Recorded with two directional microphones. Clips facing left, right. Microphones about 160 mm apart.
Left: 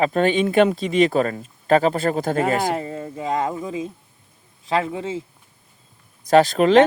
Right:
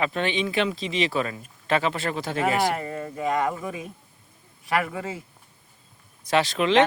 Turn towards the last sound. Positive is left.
turn(degrees=45)  # may be behind; listen again after turning